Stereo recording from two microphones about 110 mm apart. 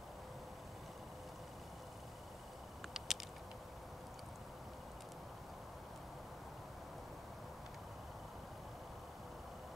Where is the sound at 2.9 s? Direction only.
Centre (ahead or behind).